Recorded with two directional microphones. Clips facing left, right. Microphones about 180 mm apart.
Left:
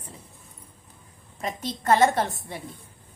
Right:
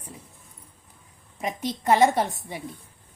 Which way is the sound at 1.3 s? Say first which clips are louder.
Right 2 dB; 15° right (ahead or behind).